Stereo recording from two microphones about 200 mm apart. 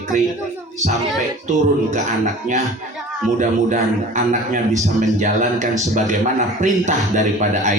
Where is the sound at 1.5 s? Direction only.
35° right (ahead or behind).